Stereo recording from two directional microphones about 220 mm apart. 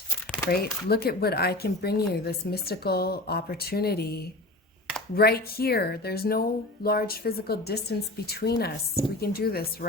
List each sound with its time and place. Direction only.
0.5 s speech: 45° left (ahead or behind)